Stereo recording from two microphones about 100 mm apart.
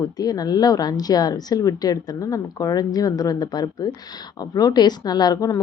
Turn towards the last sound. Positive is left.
turn(degrees=35)  # may be behind; listen again after turning